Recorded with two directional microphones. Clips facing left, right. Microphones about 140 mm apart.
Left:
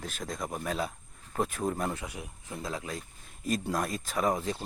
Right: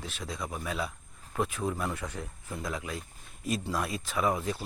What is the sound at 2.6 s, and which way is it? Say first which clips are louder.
Speech: even; 30° left (ahead or behind).